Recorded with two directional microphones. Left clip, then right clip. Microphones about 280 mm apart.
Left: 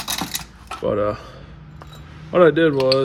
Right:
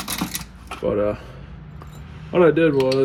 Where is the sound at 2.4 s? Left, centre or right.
Left.